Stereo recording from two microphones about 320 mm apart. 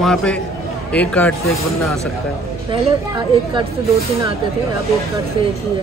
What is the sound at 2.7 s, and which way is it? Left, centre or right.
Speech, centre.